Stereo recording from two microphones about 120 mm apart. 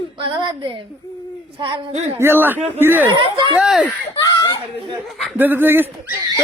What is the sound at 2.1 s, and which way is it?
Speech, 20° right (ahead or behind).